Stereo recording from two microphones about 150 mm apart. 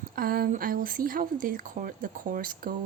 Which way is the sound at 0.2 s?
80° right.